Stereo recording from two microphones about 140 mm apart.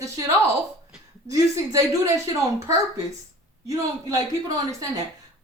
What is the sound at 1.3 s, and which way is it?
Speech, 25° right (ahead or behind).